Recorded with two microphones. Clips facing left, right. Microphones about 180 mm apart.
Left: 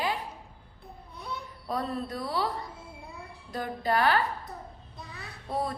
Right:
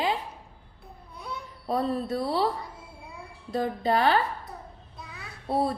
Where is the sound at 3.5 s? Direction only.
25° right (ahead or behind).